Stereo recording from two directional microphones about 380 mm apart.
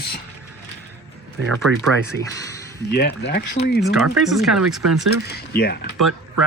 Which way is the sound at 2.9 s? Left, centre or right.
Left.